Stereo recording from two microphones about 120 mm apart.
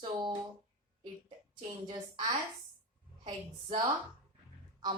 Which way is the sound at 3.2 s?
40° right (ahead or behind).